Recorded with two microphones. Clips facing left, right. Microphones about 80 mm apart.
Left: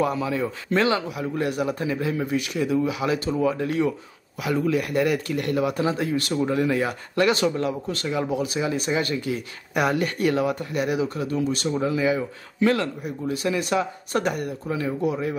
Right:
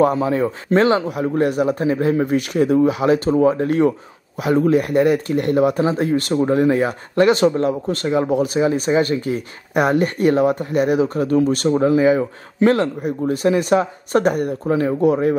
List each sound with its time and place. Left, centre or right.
0.0 s a man's voice: right